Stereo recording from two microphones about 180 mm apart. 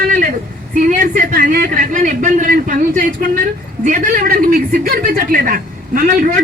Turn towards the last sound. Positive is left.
turn(degrees=-50)  # may be behind; listen again after turning